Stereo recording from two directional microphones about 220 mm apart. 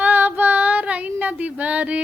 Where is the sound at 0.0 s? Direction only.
10° right (ahead or behind).